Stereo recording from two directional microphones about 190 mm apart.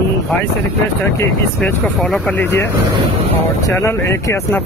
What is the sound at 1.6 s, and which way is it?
Speech, centre (ahead or behind).